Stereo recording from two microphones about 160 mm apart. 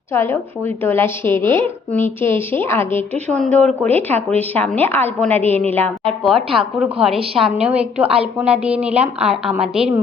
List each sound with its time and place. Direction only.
0.1 s a woman's voice: 15° left (ahead or behind)
6.2 s a woman's voice: centre (ahead or behind)
8.0 s a woman's voice: 35° right (ahead or behind)
8.4 s a woman's voice: 5° right (ahead or behind)